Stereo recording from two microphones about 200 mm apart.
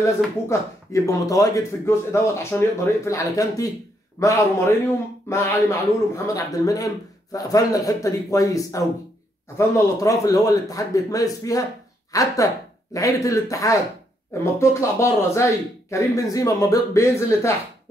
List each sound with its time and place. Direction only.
0.0 s speech: 15° left (ahead or behind)